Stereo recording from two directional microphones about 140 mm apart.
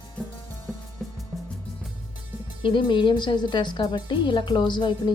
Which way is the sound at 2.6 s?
35° left (ahead or behind).